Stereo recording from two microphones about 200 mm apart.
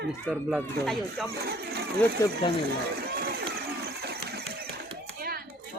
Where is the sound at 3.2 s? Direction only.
50° right (ahead or behind).